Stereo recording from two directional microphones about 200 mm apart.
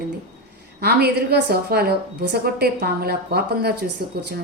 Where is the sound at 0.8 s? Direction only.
50° right (ahead or behind).